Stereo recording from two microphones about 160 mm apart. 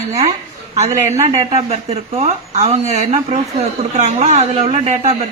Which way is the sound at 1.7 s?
45° right (ahead or behind).